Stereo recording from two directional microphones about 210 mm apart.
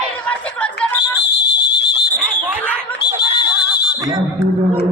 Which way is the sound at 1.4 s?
50° left (ahead or behind).